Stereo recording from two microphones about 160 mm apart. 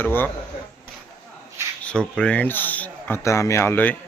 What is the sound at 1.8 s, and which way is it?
Speech, 5° left (ahead or behind).